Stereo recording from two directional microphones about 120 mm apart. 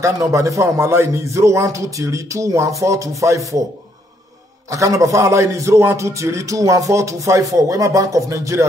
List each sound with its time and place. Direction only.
0.0 s a man's voice: 25° right (ahead or behind)
4.6 s a man's voice: 25° right (ahead or behind)